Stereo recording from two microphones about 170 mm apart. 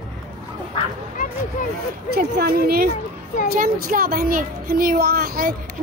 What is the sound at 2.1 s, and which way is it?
Speech, 65° right (ahead or behind).